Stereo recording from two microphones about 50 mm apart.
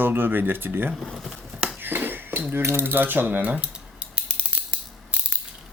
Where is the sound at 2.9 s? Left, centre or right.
Right.